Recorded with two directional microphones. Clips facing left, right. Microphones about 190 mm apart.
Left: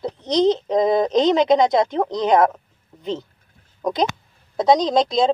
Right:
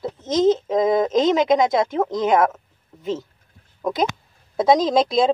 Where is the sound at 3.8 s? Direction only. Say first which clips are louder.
Left 1 dB; 5° right (ahead or behind).